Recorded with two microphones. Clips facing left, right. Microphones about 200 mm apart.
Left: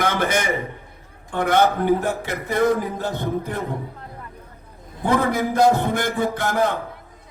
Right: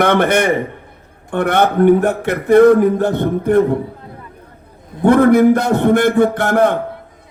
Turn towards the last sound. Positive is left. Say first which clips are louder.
# right 7 dB
turn(degrees=-60)  # may be behind; listen again after turning